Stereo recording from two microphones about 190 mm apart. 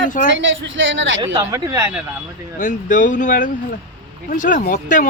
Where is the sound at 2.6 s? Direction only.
40° left (ahead or behind).